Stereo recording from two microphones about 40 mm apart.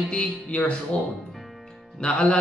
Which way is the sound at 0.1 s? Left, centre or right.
Centre.